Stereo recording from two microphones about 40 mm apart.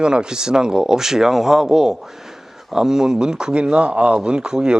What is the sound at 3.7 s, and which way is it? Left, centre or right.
Speech, right.